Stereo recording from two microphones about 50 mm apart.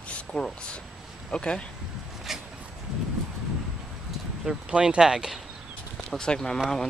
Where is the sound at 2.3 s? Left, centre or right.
Centre.